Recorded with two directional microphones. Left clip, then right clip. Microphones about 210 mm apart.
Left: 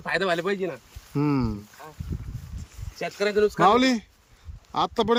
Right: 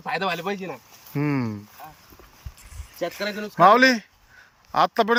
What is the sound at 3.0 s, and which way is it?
Speech, 15° left (ahead or behind).